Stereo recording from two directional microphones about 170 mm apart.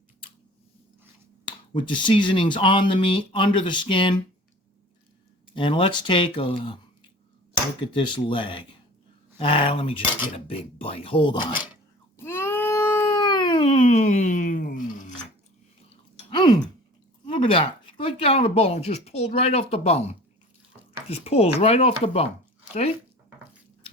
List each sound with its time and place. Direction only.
1.9 s speech: 30° left (ahead or behind)
5.5 s speech: 30° left (ahead or behind)
7.8 s speech: 30° left (ahead or behind)
12.1 s cat: 15° left (ahead or behind)
13.8 s a sound: 45° left (ahead or behind)
16.3 s a sound: 25° left (ahead or behind)
17.2 s speech: 30° left (ahead or behind)